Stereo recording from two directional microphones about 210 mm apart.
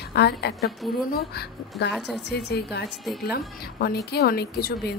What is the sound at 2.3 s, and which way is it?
A woman's voice, 50° left (ahead or behind).